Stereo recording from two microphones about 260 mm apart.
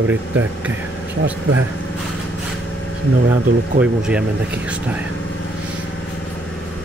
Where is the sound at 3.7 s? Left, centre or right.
Centre.